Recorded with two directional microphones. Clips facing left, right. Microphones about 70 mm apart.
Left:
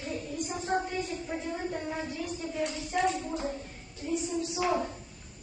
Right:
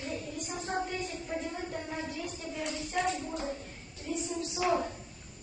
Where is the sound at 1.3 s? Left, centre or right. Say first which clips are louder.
Even; centre.